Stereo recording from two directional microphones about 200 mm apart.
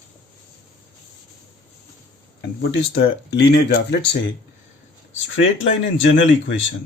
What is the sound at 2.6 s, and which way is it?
Speech, 60° left (ahead or behind).